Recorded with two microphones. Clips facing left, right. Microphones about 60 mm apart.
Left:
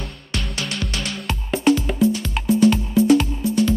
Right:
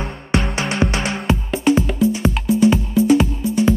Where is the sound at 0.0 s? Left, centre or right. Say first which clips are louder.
Right 9 dB; right.